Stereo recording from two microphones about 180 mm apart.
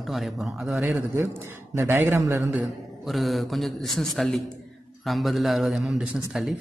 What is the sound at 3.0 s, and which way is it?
A man's voice, centre (ahead or behind).